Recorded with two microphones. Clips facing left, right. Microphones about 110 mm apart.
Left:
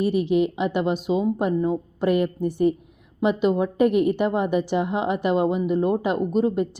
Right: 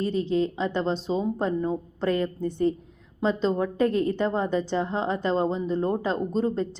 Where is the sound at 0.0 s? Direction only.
15° left (ahead or behind).